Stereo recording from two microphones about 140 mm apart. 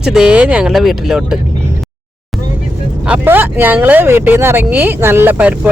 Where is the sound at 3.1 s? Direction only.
15° right (ahead or behind).